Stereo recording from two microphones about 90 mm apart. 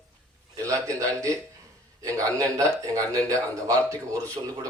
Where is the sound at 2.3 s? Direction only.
35° right (ahead or behind).